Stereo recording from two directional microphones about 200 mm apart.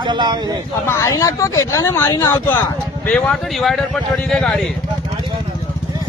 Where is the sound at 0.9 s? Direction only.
15° left (ahead or behind).